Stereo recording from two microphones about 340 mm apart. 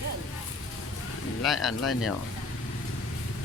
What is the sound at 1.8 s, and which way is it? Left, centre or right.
Speech, left.